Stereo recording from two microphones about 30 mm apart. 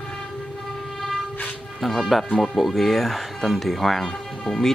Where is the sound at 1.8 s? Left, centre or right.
Centre.